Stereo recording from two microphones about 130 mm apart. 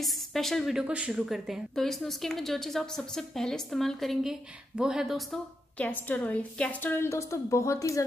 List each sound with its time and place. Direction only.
0.0 s a woman's voice: centre (ahead or behind)
5.8 s a woman's voice: 10° left (ahead or behind)